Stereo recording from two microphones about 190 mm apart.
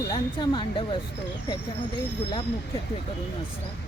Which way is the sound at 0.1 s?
25° left (ahead or behind).